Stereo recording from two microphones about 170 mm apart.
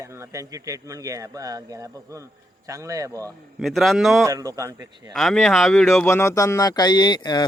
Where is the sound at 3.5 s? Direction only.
Centre (ahead or behind).